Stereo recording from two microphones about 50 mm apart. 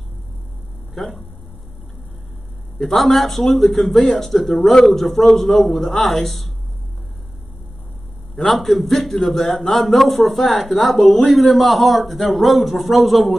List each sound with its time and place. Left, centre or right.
1.0 s speech: centre
2.8 s speech: centre
8.4 s speech: centre